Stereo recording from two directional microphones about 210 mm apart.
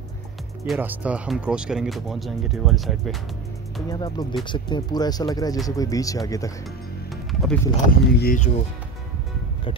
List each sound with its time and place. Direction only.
0.7 s speech: 5° right (ahead or behind)
3.9 s speech: 20° left (ahead or behind)
7.9 s speech: 45° left (ahead or behind)